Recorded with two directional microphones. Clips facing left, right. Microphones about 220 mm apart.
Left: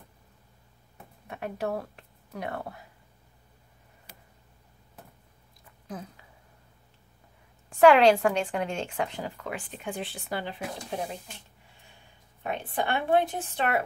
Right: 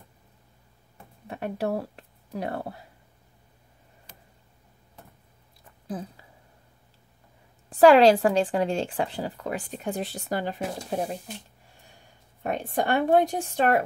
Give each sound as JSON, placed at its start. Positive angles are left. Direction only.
{"t": 1.2, "sound": "speech", "side_deg": -35}
{"t": 4.1, "sound": "tick", "side_deg": 10}
{"t": 6.0, "sound": "a woman's voice", "side_deg": -30}
{"t": 7.7, "sound": "a woman's voice", "side_deg": -35}
{"t": 12.4, "sound": "a woman's voice", "side_deg": -40}